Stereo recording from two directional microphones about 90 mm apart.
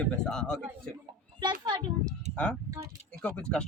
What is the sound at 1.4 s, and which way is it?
Speech, 60° right (ahead or behind).